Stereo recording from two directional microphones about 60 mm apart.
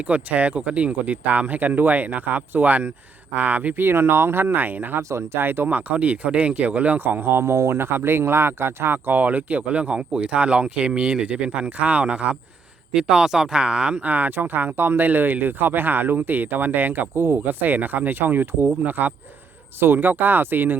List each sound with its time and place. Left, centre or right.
0.0 s speech: right
5.0 s speech: right